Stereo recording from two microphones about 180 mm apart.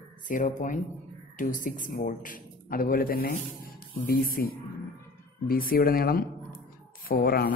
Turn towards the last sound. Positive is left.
turn(degrees=60)  # may be behind; listen again after turning